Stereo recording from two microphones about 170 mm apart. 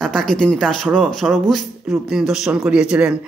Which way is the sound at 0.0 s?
5° left (ahead or behind).